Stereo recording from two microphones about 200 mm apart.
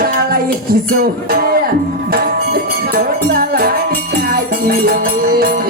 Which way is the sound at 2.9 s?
45° right (ahead or behind).